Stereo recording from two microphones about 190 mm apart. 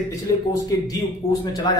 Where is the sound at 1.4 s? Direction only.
20° left (ahead or behind).